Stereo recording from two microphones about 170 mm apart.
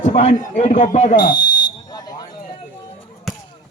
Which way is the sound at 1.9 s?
20° left (ahead or behind).